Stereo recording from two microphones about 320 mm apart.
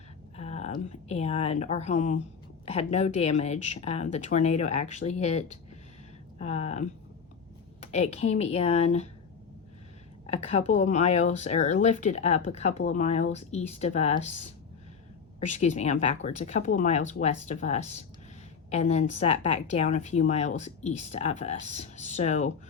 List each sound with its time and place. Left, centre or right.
0.3 s speech: centre
10.2 s speech: centre
15.4 s speech: left